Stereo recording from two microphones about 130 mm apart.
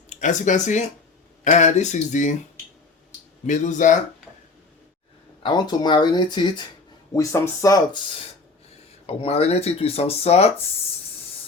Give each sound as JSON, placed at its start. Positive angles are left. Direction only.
{"t": 0.1, "sound": "speech", "side_deg": 70}
{"t": 3.4, "sound": "speech", "side_deg": 70}
{"t": 5.4, "sound": "speech", "side_deg": 35}
{"t": 7.1, "sound": "speech", "side_deg": 25}
{"t": 9.0, "sound": "speech", "side_deg": 50}